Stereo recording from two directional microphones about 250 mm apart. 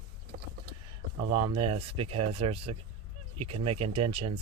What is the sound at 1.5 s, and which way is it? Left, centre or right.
Speech, right.